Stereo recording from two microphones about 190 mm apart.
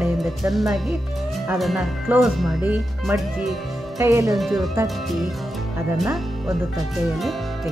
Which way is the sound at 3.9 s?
15° right (ahead or behind).